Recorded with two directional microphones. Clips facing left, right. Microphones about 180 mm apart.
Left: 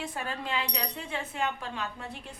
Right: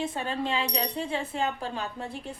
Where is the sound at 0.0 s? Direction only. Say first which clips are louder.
Right 5 dB; 25° right (ahead or behind).